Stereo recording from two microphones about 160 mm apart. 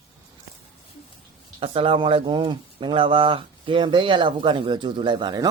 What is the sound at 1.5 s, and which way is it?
Speech, 35° right (ahead or behind).